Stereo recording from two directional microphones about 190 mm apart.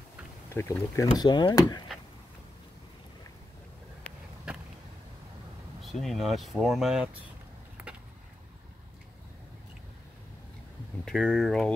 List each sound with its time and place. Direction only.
0.5 s speech: 15° left (ahead or behind)
5.8 s speech: centre (ahead or behind)
11.1 s speech: centre (ahead or behind)